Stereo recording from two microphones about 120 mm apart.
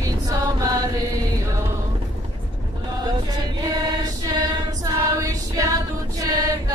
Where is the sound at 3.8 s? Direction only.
35° right (ahead or behind).